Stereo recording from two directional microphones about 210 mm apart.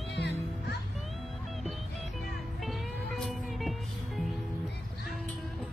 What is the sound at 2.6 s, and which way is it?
Music, centre (ahead or behind).